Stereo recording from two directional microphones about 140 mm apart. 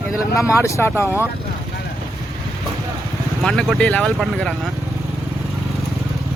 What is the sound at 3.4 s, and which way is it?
Speech, 5° left (ahead or behind).